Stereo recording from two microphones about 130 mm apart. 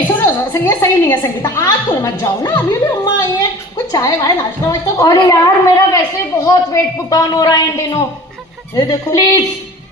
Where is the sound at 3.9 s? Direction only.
25° left (ahead or behind).